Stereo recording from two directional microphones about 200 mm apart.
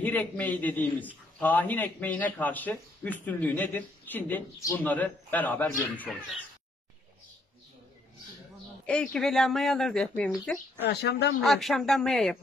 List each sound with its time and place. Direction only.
0.0 s a man's voice: 10° left (ahead or behind)
8.8 s speech: 5° left (ahead or behind)
10.9 s speech: 55° left (ahead or behind)
11.4 s speech: centre (ahead or behind)